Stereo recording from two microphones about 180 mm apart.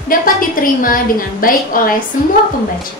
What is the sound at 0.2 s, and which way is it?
A woman's voice, 50° left (ahead or behind).